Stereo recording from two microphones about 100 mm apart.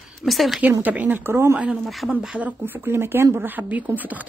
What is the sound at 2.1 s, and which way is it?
Speech, 10° right (ahead or behind).